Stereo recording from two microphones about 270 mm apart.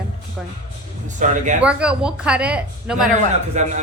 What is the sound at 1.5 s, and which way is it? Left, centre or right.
Speech, centre.